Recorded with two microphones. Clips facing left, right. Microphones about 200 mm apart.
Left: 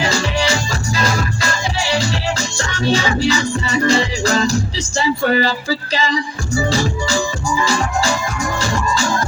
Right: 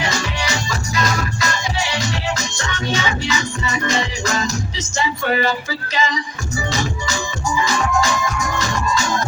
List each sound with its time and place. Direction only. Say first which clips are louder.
0.0 s music: left 5 dB; 30° left (ahead or behind)